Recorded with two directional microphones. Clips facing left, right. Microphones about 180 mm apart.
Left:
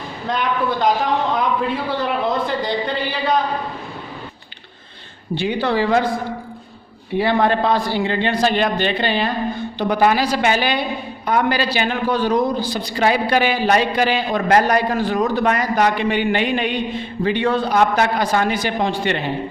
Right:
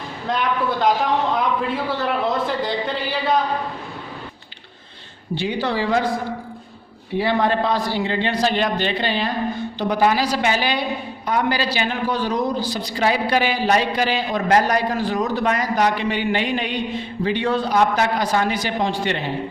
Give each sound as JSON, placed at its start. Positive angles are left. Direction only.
{"t": 0.3, "sound": "a man's voice", "side_deg": 0}
{"t": 2.0, "sound": "a man's voice", "side_deg": 0}
{"t": 5.3, "sound": "a man's voice", "side_deg": 55}
{"t": 7.2, "sound": "a man's voice", "side_deg": 60}